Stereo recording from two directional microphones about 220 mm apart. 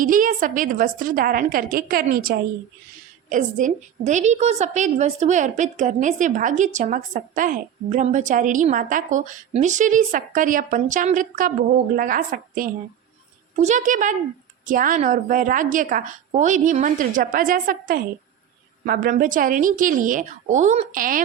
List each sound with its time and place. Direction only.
0.0 s a woman's voice: 40° right (ahead or behind)